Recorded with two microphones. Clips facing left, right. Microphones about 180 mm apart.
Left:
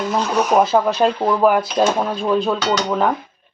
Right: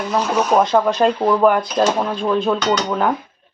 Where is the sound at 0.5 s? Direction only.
5° left (ahead or behind).